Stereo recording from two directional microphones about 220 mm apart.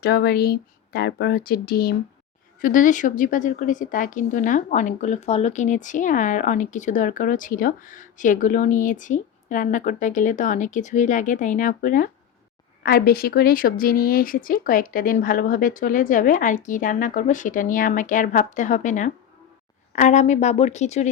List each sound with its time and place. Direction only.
0.0 s a woman's voice: 45° left (ahead or behind); by 21.1 s 30° left (ahead or behind)